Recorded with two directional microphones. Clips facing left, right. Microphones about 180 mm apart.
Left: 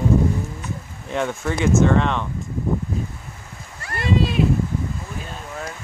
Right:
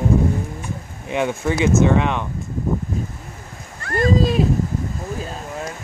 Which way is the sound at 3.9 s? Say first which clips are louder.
Right 4 dB; 40° right (ahead or behind).